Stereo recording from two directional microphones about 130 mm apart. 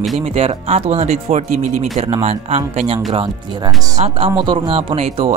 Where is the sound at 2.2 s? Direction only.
50° right (ahead or behind).